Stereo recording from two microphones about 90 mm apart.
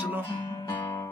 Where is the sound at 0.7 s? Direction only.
30° left (ahead or behind).